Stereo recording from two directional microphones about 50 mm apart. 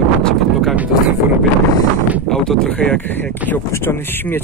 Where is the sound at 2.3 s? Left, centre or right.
Centre.